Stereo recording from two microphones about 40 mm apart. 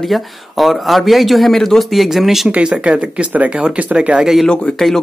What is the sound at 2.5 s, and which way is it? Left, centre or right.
Speech, right.